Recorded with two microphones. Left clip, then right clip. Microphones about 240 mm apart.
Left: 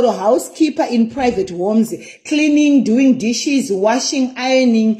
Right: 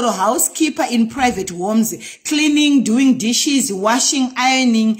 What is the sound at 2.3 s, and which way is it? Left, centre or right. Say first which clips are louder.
Speech: left 1 dB; centre.